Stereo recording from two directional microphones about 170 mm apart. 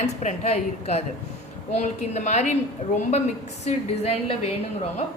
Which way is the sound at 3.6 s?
40° left (ahead or behind).